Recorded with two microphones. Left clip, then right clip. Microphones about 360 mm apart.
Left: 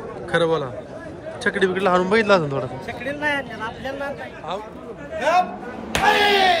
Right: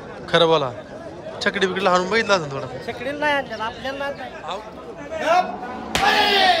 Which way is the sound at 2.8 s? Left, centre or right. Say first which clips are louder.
Right 1 dB; centre.